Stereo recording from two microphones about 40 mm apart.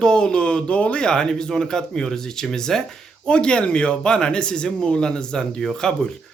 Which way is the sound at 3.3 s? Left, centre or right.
Left.